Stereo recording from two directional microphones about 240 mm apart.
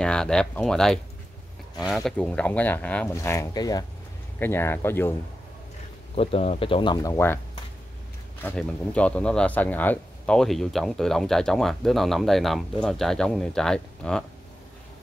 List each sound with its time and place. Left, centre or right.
0.0 s speech: centre
2.0 s speech: centre
6.1 s speech: left
8.4 s speech: centre